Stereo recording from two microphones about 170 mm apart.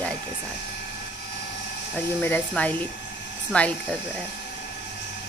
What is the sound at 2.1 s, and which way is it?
A woman's voice, 10° left (ahead or behind).